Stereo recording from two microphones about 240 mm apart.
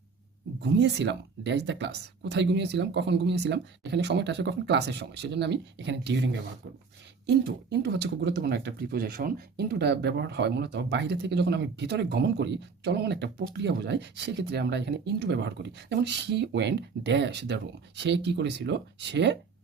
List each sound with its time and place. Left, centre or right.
0.6 s speech: right